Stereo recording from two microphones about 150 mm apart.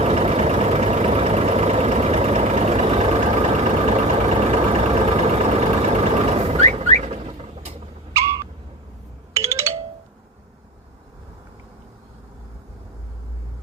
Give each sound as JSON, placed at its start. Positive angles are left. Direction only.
{"t": 0.0, "sound": "vehicle", "side_deg": -45}
{"t": 9.3, "sound": "music", "side_deg": -20}